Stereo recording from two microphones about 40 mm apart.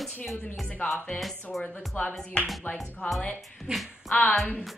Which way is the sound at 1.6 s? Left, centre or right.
Left.